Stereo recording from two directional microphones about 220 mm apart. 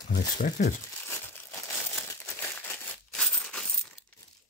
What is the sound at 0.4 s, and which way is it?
Speech, 35° left (ahead or behind).